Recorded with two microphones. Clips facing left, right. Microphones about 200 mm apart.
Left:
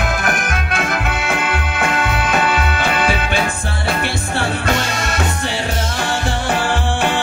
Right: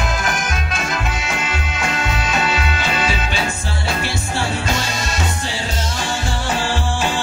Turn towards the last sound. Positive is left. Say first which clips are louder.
# left 3 dB
turn(degrees=60)  # may be behind; listen again after turning